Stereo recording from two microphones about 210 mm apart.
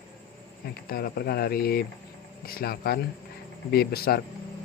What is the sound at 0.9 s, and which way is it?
Speech, 45° left (ahead or behind).